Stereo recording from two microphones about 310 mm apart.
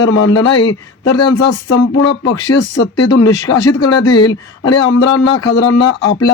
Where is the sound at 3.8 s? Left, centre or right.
Left.